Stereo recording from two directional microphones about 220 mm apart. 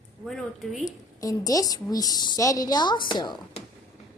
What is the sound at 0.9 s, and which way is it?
A woman's voice, 15° left (ahead or behind).